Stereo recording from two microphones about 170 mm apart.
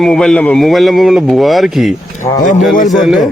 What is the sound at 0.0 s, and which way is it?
A man's voice, 5° left (ahead or behind).